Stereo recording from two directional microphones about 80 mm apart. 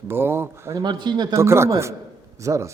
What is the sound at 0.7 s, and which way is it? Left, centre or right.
Speech, right.